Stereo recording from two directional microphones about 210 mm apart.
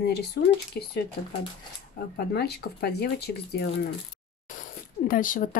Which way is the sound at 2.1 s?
50° left (ahead or behind).